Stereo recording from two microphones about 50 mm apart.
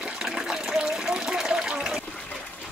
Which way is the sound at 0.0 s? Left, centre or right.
Centre.